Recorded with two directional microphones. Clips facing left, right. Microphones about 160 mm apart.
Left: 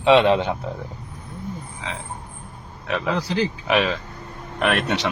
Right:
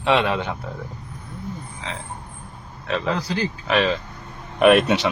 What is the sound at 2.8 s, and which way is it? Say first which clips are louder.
Speech: even; 15° left (ahead or behind).